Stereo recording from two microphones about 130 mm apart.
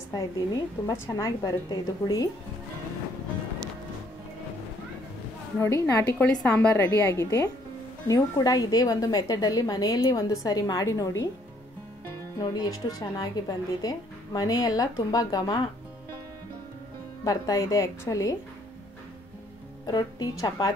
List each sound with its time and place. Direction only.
0.1 s a woman's voice: 25° left (ahead or behind)
5.6 s a woman's voice: 20° left (ahead or behind)
6.4 s a woman's voice: 10° left (ahead or behind)
7.1 s a woman's voice: 25° left (ahead or behind)
12.4 s a woman's voice: 30° left (ahead or behind)
17.2 s a woman's voice: 25° left (ahead or behind)
19.9 s a woman's voice: 30° left (ahead or behind)